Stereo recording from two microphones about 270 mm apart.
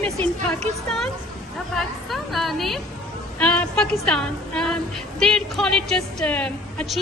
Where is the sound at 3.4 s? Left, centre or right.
Centre.